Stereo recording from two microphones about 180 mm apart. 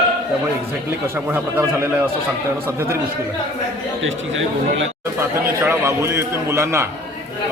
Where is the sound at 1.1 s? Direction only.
15° right (ahead or behind).